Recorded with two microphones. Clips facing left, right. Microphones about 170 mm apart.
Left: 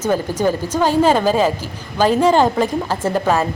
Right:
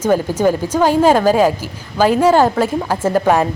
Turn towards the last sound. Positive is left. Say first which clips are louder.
# right 3 dB
turn(degrees=-10)  # may be behind; listen again after turning